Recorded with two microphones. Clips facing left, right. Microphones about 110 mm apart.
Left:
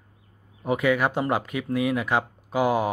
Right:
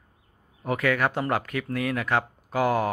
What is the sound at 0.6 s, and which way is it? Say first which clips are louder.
Speech: left 2 dB; 15° left (ahead or behind).